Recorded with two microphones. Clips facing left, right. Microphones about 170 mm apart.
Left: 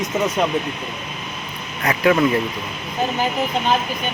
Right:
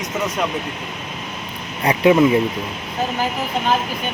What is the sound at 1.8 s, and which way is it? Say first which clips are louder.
Speech: right 3 dB; 20° right (ahead or behind).